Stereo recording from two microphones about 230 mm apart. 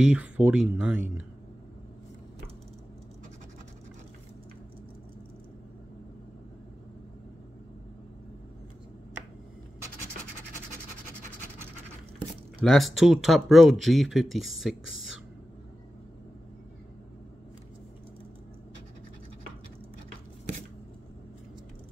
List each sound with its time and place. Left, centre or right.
0.0 s speech: centre
12.6 s speech: centre